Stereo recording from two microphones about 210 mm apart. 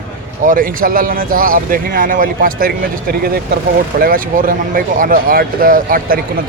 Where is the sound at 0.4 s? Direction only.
40° right (ahead or behind).